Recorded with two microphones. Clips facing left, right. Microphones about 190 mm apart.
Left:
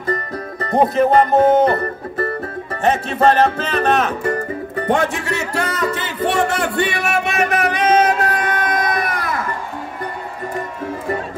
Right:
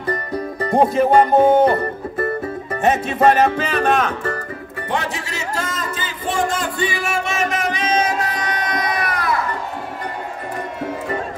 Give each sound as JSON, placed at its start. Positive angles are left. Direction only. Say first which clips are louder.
{"t": 0.3, "sound": "music", "louder": "right 2 dB", "side_deg": -10}
{"t": 3.9, "sound": "speech", "louder": "left 1 dB", "side_deg": 5}
{"t": 4.7, "sound": "music", "louder": "left 6 dB", "side_deg": 45}